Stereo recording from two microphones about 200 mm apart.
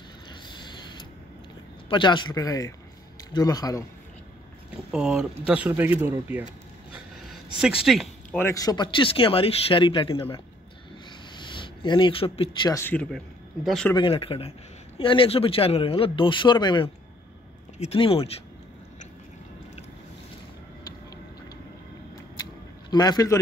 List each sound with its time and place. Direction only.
0.3 s a sound: 20° left (ahead or behind)
1.9 s speech: 25° left (ahead or behind)
4.9 s a man's voice: 5° right (ahead or behind)
7.6 s speech: centre (ahead or behind)
8.4 s speech: 15° left (ahead or behind)
12.7 s speech: 10° left (ahead or behind)
13.9 s speech: 25° left (ahead or behind)
22.4 s a sound: 20° left (ahead or behind)